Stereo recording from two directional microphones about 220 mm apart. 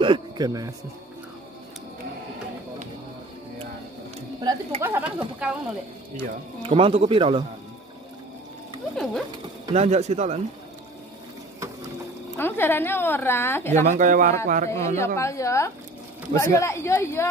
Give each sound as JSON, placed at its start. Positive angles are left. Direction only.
{"t": 0.0, "sound": "a man's voice", "side_deg": -20}
{"t": 4.4, "sound": "speech", "side_deg": -20}
{"t": 6.1, "sound": "speech", "side_deg": -25}
{"t": 8.9, "sound": "speech", "side_deg": 0}
{"t": 9.8, "sound": "speech", "side_deg": -30}
{"t": 12.4, "sound": "a woman's voice", "side_deg": 10}
{"t": 13.7, "sound": "a man's voice", "side_deg": -35}
{"t": 15.0, "sound": "a woman's voice", "side_deg": 15}